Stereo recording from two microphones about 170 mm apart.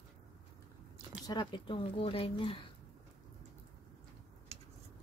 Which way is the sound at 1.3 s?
25° left (ahead or behind).